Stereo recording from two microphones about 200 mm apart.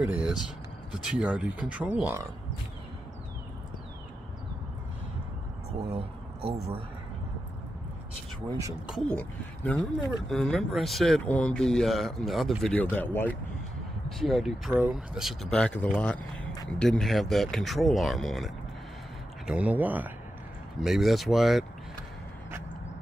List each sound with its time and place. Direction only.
0.0 s speech: 5° right (ahead or behind)
5.8 s speech: 30° right (ahead or behind)
8.8 s speech: centre (ahead or behind)